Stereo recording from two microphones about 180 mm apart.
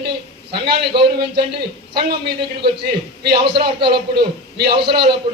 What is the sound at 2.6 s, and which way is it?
Speech, 65° right (ahead or behind).